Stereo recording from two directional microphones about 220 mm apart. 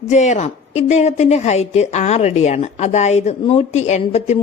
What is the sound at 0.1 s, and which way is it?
A woman's voice, 30° left (ahead or behind).